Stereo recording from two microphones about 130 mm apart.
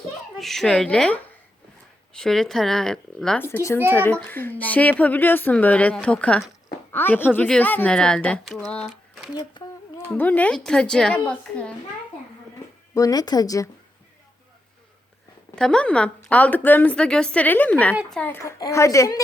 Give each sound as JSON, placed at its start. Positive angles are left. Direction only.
{"t": 0.3, "sound": "speech", "side_deg": 0}
{"t": 3.4, "sound": "a woman's voice", "side_deg": 20}
{"t": 9.3, "sound": "speech", "side_deg": 30}
{"t": 10.1, "sound": "a woman's voice", "side_deg": 15}
{"t": 12.9, "sound": "speech", "side_deg": 30}
{"t": 15.5, "sound": "a woman's voice", "side_deg": 5}